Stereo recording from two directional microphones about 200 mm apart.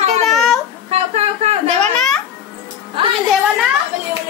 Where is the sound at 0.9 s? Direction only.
30° right (ahead or behind).